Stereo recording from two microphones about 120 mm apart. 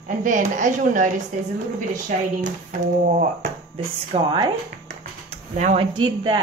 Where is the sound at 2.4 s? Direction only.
90° right.